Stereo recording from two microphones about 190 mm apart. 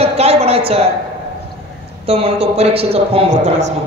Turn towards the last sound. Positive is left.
turn(degrees=-35)  # may be behind; listen again after turning